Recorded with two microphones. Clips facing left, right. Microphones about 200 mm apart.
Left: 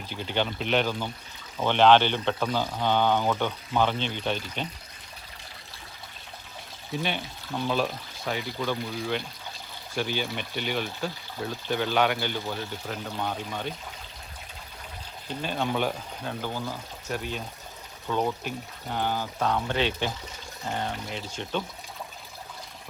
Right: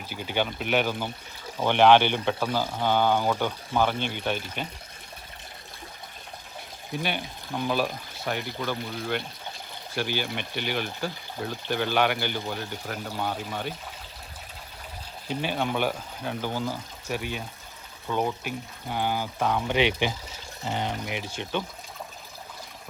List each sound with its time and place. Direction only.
0.1 s speech: 10° right (ahead or behind)
6.9 s speech: 5° right (ahead or behind)
15.3 s speech: 5° right (ahead or behind)